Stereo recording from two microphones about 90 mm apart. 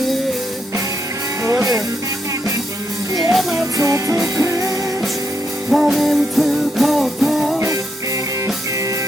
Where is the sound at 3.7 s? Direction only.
35° right (ahead or behind).